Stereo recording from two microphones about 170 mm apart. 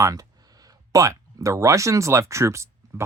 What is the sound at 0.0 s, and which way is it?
Speech, 20° right (ahead or behind).